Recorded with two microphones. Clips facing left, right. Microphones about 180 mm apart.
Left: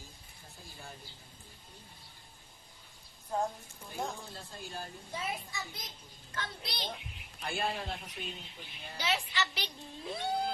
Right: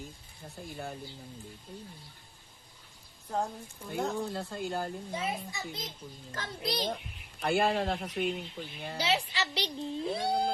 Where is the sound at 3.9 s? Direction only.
65° right (ahead or behind).